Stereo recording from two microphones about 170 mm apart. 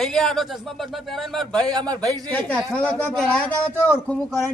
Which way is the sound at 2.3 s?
10° left (ahead or behind).